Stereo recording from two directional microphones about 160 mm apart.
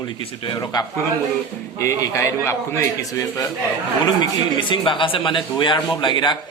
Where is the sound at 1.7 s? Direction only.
20° left (ahead or behind).